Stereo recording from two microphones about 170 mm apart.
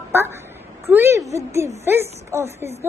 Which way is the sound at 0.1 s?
15° right (ahead or behind).